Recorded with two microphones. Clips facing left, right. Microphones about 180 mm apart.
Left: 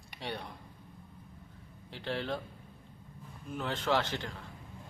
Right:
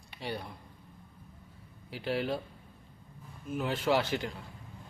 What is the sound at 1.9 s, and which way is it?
Speech, 10° right (ahead or behind).